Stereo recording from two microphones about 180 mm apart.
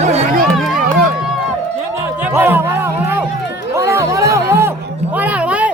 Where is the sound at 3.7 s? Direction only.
15° right (ahead or behind).